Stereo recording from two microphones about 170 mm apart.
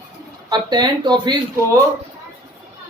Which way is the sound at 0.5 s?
25° right (ahead or behind).